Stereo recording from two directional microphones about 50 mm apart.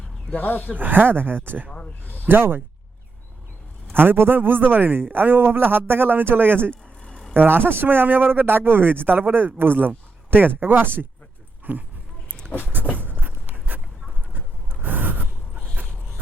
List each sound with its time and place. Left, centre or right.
0.3 s speech: left
0.8 s speech: right
1.7 s snake: left
2.2 s speech: right
3.9 s speech: right
11.7 s a sound: right
13.0 s a sound: right
15.7 s dog: right